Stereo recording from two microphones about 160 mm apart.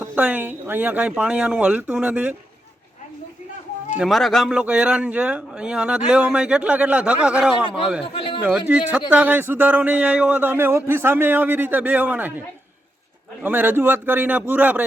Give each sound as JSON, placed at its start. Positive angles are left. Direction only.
{"t": 0.0, "sound": "a man's voice", "side_deg": -10}
{"t": 3.9, "sound": "a man's voice", "side_deg": 0}
{"t": 8.0, "sound": "speech", "side_deg": 35}
{"t": 8.4, "sound": "a man's voice", "side_deg": -10}
{"t": 13.4, "sound": "a man's voice", "side_deg": -10}